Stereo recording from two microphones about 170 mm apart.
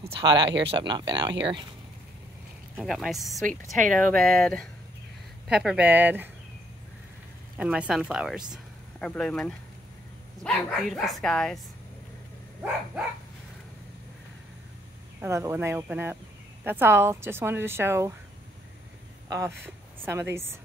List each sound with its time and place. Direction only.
0.0 s speech: 30° right (ahead or behind)
2.8 s speech: centre (ahead or behind)
3.4 s speech: 50° right (ahead or behind)
4.1 s a woman's voice: 5° left (ahead or behind)
7.5 s speech: 5° right (ahead or behind)
15.1 s a woman's voice: 15° right (ahead or behind)
19.2 s a woman's voice: 20° right (ahead or behind)